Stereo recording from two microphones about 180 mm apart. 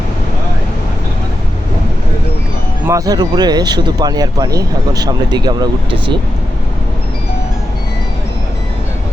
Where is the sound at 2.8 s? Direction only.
20° right (ahead or behind).